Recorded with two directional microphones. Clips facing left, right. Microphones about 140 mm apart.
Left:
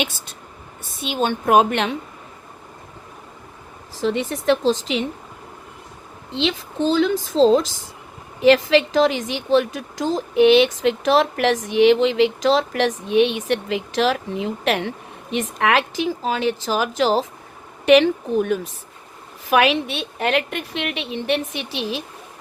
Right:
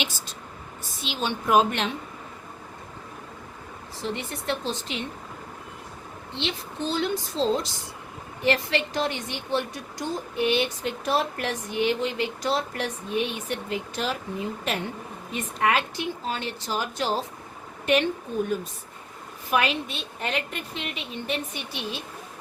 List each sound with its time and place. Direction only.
1.0 s a woman's voice: 50° left (ahead or behind)
3.9 s a woman's voice: 90° left
6.3 s a woman's voice: 90° left